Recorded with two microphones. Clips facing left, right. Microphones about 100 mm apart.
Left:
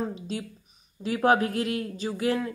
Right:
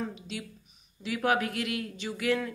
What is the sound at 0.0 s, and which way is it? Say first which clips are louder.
Speech: left 5 dB; 35° left (ahead or behind).